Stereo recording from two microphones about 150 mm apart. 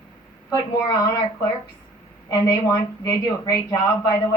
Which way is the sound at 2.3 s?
20° left (ahead or behind).